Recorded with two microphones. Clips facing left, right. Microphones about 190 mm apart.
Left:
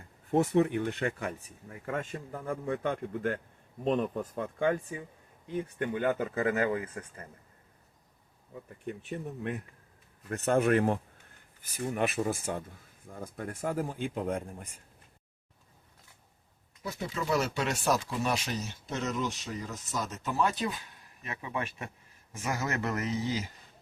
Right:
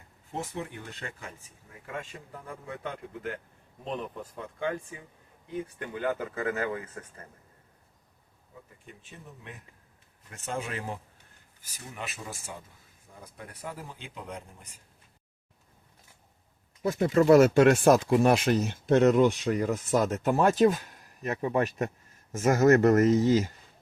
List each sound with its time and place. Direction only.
0.3 s speech: 65° left (ahead or behind)
2.0 s speech: 50° left (ahead or behind)
5.9 s speech: 25° left (ahead or behind)
8.8 s speech: 65° left (ahead or behind)
16.8 s speech: 55° right (ahead or behind)